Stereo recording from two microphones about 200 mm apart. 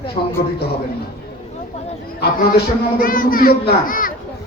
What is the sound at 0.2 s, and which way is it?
Speech, 40° left (ahead or behind).